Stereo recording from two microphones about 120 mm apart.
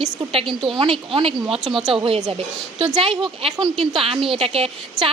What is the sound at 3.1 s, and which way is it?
Speech, centre (ahead or behind).